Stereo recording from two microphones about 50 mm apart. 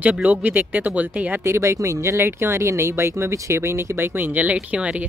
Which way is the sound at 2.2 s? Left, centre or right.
Right.